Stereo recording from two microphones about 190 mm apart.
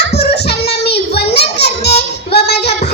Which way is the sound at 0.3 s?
60° left (ahead or behind).